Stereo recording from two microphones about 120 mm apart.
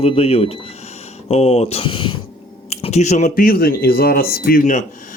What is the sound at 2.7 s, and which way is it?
Speech, 70° left (ahead or behind).